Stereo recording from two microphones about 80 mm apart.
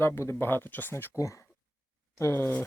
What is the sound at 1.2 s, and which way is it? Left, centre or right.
Speech, left.